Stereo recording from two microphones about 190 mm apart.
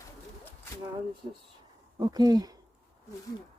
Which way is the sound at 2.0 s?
20° right (ahead or behind).